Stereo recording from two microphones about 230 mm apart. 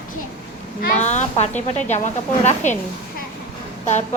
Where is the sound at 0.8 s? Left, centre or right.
Left.